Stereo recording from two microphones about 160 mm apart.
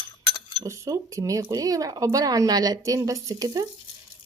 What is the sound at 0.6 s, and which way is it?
Speech, 20° right (ahead or behind).